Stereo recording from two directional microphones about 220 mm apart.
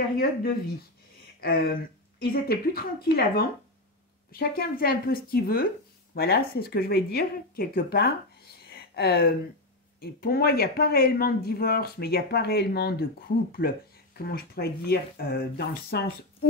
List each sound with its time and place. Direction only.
0.2 s a woman's voice: 40° left (ahead or behind)